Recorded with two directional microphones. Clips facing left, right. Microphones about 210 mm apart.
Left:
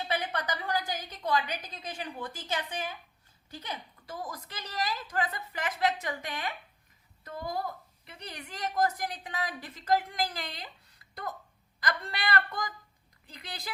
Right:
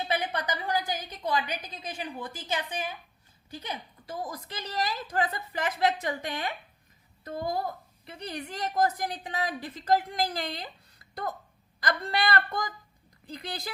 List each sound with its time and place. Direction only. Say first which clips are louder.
0.1 s a woman's voice: right 1 dB; 15° right (ahead or behind); by 10.7 s 35° right (ahead or behind)
11.8 s a woman's voice: right 5 dB; 35° right (ahead or behind)